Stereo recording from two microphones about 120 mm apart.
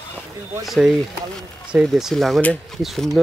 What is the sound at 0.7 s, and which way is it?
Speech, centre (ahead or behind).